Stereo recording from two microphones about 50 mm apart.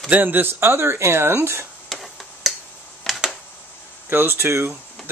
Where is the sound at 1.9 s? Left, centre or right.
Centre.